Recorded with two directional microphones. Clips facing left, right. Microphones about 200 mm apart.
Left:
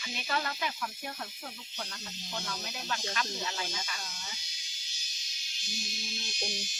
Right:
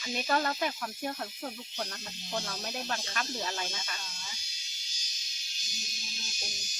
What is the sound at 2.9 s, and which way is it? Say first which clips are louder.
Speech: left 1 dB; 50° right (ahead or behind).